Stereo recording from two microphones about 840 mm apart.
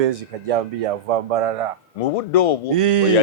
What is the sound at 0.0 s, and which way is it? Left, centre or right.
A man's voice, right.